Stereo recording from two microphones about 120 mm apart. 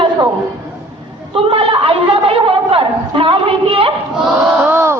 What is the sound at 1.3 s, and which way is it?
A woman's voice, 45° right (ahead or behind).